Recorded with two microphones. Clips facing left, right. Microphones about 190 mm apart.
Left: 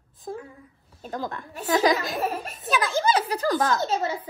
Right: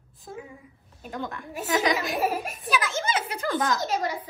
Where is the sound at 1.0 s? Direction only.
35° left (ahead or behind).